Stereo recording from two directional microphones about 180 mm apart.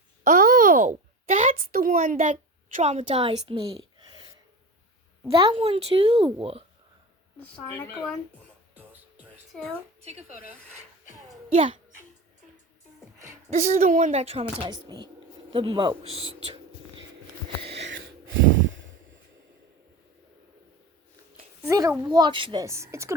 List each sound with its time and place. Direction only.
0.3 s a child's voice: 45° right (ahead or behind); by 4.3 s 25° right (ahead or behind)
5.3 s speech: 30° right (ahead or behind)
8.7 s music: 10° right (ahead or behind)
9.5 s a woman's voice: centre (ahead or behind)
10.0 s speech: 40° right (ahead or behind)
11.5 s speech: 35° right (ahead or behind)
13.3 s speech: 40° right (ahead or behind)
14.8 s speech: 20° right (ahead or behind)
17.7 s a sound: 90° right
21.7 s a child's voice: 20° right (ahead or behind)
22.6 s speech: 15° right (ahead or behind)